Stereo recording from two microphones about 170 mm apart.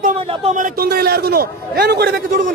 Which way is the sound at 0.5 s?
55° right (ahead or behind).